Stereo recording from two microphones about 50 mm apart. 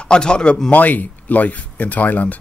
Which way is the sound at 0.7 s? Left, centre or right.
Left.